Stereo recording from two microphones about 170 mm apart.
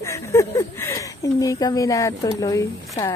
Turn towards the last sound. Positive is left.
turn(degrees=20)  # may be behind; listen again after turning